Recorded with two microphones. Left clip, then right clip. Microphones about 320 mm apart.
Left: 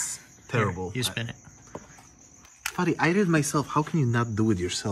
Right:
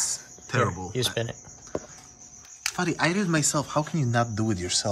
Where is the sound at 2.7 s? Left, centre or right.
Centre.